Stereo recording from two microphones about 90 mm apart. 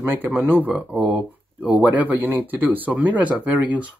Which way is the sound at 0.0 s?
25° right (ahead or behind).